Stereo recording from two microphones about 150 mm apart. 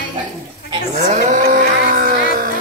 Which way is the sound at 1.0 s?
60° right (ahead or behind).